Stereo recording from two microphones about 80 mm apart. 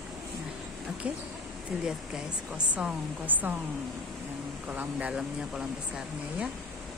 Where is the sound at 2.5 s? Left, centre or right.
Centre.